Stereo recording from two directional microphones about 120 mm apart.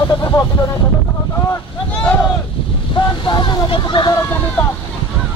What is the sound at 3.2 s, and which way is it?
Speech, 40° left (ahead or behind).